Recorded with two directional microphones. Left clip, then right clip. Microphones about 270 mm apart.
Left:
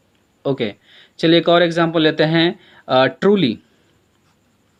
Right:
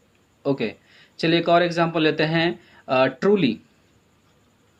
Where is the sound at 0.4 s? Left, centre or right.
Left.